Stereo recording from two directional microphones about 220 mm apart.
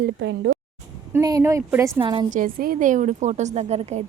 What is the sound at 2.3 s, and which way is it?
A woman's voice, 40° right (ahead or behind).